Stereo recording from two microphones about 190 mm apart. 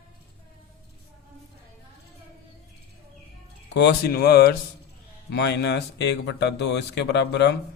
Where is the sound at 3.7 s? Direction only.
60° left (ahead or behind).